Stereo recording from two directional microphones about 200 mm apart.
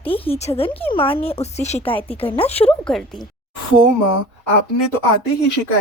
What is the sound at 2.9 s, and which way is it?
Speech, centre (ahead or behind).